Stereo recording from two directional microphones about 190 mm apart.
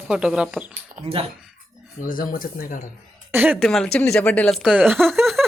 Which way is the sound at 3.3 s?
10° right (ahead or behind).